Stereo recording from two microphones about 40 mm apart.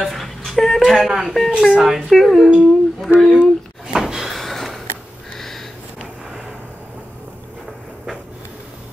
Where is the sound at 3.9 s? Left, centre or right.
Centre.